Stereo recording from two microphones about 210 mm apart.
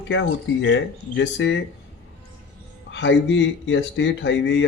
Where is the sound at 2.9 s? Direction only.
60° left (ahead or behind).